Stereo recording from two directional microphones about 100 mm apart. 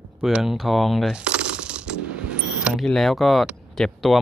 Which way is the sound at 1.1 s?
10° right (ahead or behind).